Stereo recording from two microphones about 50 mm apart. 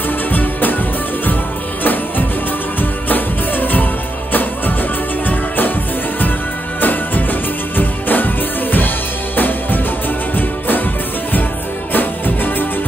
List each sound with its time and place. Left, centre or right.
0.3 s music: left
1.8 s music: left
6.8 s music: left